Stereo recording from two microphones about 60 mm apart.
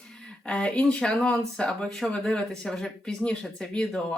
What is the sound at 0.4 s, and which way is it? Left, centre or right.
Speech, centre.